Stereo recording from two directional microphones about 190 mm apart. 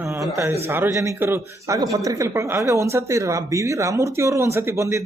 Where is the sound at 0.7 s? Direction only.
15° right (ahead or behind).